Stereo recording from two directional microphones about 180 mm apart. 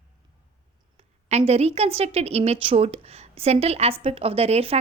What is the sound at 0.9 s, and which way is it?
A woman's voice, 35° right (ahead or behind).